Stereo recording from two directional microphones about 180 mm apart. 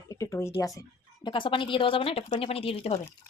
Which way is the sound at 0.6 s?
20° left (ahead or behind).